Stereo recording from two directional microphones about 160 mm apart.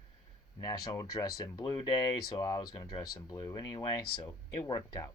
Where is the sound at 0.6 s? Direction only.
25° left (ahead or behind).